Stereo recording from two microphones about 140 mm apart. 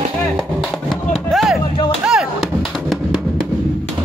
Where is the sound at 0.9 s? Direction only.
Centre (ahead or behind).